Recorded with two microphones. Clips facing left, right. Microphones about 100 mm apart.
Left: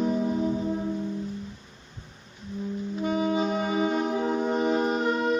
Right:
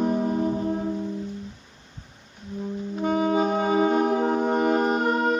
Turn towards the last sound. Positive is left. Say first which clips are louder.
# right 2 dB
turn(degrees=-45)  # may be behind; listen again after turning